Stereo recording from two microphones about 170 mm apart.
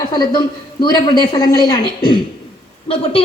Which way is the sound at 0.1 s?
25° left (ahead or behind).